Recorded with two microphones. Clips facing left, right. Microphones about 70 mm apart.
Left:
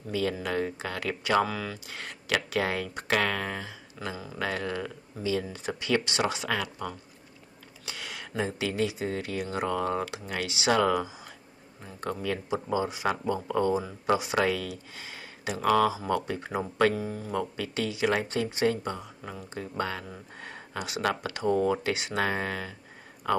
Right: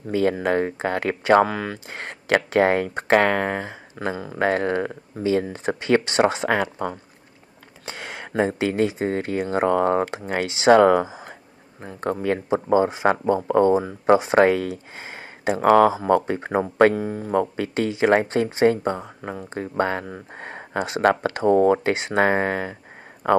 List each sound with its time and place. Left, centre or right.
0.0 s speech: right